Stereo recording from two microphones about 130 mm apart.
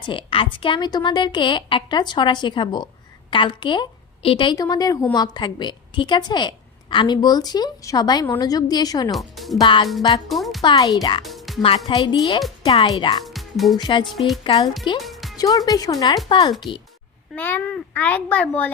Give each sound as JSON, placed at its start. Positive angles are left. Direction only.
{"t": 0.0, "sound": "speech", "side_deg": 40}
{"t": 9.1, "sound": "speech", "side_deg": 0}
{"t": 9.6, "sound": "speech", "side_deg": 35}
{"t": 10.2, "sound": "speech", "side_deg": 0}
{"t": 10.6, "sound": "speech", "side_deg": 35}
{"t": 11.3, "sound": "music", "side_deg": 0}
{"t": 11.9, "sound": "speech", "side_deg": 40}
{"t": 13.2, "sound": "music", "side_deg": 0}
{"t": 13.7, "sound": "speech", "side_deg": 35}
{"t": 14.0, "sound": "speech", "side_deg": 0}
{"t": 14.4, "sound": "speech", "side_deg": 35}
{"t": 17.3, "sound": "a child's voice", "side_deg": 15}